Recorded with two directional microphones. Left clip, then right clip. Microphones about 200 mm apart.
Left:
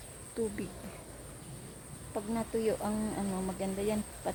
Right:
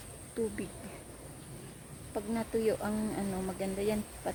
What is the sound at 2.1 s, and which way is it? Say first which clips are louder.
Speech: right 1 dB; 5° right (ahead or behind).